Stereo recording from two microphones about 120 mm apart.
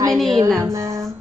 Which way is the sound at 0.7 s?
25° right (ahead or behind).